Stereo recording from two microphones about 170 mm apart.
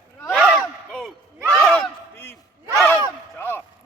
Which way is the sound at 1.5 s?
5° left (ahead or behind).